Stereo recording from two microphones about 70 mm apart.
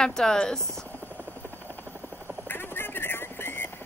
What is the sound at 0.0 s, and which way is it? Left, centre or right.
Speech, centre.